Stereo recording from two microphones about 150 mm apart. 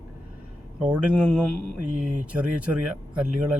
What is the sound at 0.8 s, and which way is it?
Speech, 5° right (ahead or behind).